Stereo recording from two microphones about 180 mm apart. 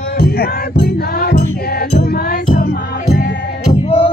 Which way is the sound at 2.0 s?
45° left (ahead or behind).